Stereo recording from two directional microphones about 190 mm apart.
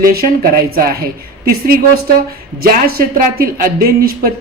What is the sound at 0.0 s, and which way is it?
A woman's voice, 50° right (ahead or behind).